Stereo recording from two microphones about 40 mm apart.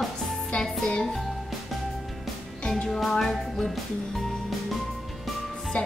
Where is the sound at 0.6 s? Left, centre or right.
Left.